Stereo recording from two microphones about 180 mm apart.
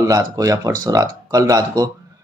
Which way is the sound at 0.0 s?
20° right (ahead or behind).